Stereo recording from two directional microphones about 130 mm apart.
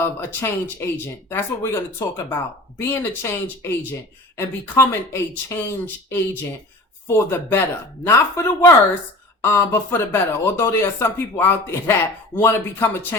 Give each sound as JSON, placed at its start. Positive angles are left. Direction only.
{"t": 0.0, "sound": "speech", "side_deg": 20}